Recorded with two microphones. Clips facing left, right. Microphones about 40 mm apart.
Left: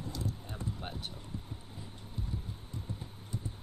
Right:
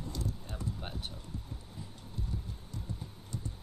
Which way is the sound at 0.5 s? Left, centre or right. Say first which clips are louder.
Even; centre.